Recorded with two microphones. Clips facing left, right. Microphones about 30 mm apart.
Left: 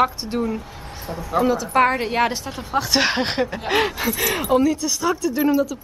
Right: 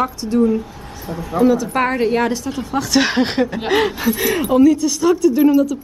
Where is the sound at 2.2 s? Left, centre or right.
Left.